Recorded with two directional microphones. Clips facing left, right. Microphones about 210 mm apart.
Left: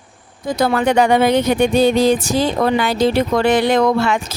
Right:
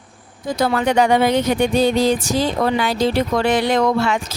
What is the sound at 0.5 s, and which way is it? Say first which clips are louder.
Speech: left 2 dB; 55° left (ahead or behind).